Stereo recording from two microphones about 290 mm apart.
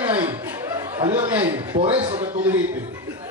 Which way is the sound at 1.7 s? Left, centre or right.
Centre.